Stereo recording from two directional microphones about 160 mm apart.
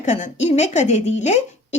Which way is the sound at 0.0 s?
50° left (ahead or behind).